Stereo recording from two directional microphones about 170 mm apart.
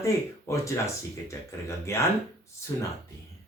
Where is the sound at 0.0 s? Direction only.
20° left (ahead or behind).